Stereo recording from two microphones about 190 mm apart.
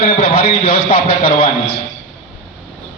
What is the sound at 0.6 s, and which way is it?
Speech, 30° left (ahead or behind).